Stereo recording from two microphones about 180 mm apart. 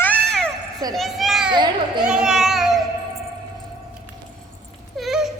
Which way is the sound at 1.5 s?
25° right (ahead or behind).